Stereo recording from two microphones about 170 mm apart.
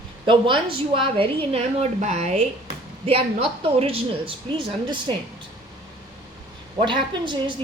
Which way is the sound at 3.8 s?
35° right (ahead or behind).